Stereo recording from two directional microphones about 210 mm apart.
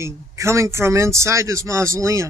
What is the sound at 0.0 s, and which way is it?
Speech, 15° right (ahead or behind).